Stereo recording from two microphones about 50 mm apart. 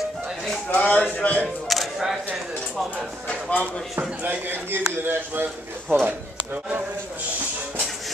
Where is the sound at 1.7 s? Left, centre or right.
Centre.